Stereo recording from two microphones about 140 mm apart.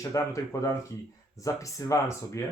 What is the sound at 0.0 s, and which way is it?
Speech, 20° left (ahead or behind).